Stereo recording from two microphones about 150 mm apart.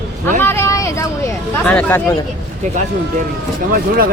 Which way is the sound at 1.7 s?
10° left (ahead or behind).